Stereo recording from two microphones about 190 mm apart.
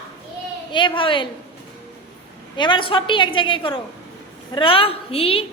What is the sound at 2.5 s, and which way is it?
A woman's voice, 25° left (ahead or behind).